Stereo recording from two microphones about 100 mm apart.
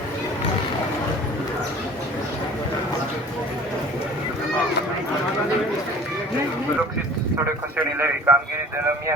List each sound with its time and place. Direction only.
7.9 s a man's voice: 25° right (ahead or behind)